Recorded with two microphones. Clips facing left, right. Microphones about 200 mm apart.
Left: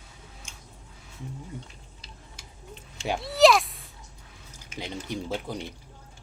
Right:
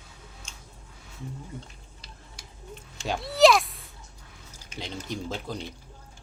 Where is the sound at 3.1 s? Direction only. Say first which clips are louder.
Even; centre (ahead or behind).